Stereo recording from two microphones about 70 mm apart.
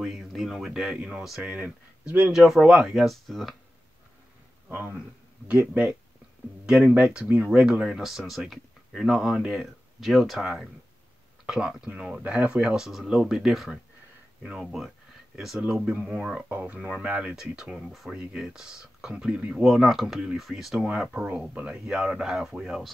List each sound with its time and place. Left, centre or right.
0.0 s speech: centre
1.5 s speech: centre
2.3 s speech: centre
4.6 s speech: right; by 9.7 s centre
9.9 s speech: centre
16.4 s speech: right
17.0 s speech: centre
18.1 s speech: centre